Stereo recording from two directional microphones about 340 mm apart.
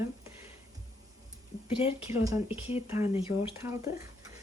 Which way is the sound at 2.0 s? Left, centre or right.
Centre.